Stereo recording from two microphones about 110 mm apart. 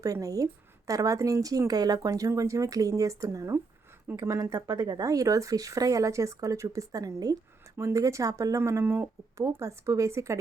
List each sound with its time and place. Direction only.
0.0 s speech: 30° right (ahead or behind)